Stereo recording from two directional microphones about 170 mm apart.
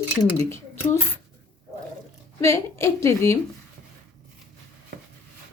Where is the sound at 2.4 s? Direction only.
15° left (ahead or behind).